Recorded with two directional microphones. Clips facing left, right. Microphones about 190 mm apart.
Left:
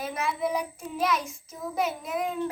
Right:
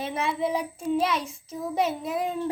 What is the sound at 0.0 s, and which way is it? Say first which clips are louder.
Child singing: right 2 dB; 30° right (ahead or behind).